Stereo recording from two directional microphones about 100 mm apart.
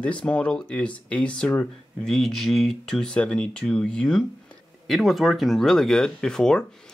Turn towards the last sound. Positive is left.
turn(degrees=5)  # may be behind; listen again after turning